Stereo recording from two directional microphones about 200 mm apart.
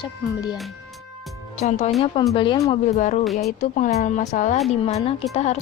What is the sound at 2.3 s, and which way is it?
Speech, 25° left (ahead or behind).